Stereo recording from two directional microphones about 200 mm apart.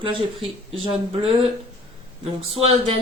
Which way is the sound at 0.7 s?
25° right (ahead or behind).